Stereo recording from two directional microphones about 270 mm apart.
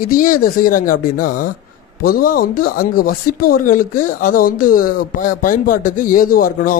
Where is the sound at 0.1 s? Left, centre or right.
Left.